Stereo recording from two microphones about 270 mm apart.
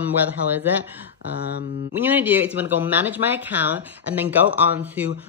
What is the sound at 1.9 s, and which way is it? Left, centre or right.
Speech, centre.